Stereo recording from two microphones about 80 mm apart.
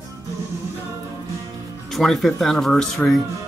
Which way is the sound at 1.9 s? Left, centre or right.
Centre.